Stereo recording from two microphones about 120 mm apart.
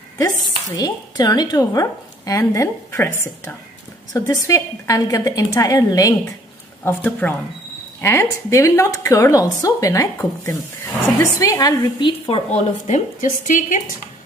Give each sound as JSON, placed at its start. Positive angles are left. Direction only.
{"t": 0.7, "sound": "a woman's voice", "side_deg": 35}
{"t": 6.8, "sound": "a woman's voice", "side_deg": 15}
{"t": 12.1, "sound": "a woman's voice", "side_deg": 50}
{"t": 12.5, "sound": "a woman's voice", "side_deg": 80}